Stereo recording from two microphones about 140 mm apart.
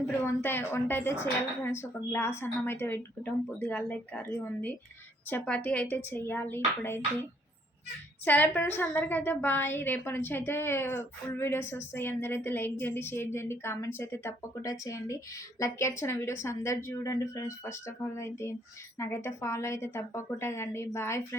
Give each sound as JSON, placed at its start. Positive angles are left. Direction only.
{"t": 0.3, "sound": "a woman's voice", "side_deg": 15}
{"t": 8.2, "sound": "a woman's voice", "side_deg": 15}